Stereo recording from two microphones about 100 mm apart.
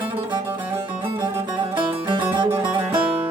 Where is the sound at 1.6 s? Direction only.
65° right (ahead or behind).